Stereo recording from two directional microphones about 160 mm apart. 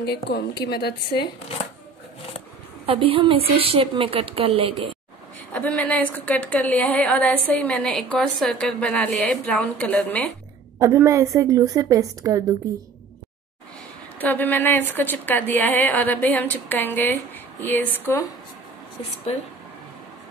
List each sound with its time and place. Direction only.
0.0 s a woman's voice: 90° left
2.9 s a woman's voice: 35° right (ahead or behind)
5.5 s a woman's voice: 10° left (ahead or behind)
10.8 s a woman's voice: 20° right (ahead or behind)
14.1 s a woman's voice: 10° left (ahead or behind)
19.3 s speech: 40° left (ahead or behind)